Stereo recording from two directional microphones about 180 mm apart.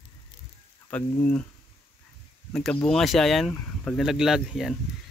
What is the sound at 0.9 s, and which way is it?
Speech, 10° left (ahead or behind).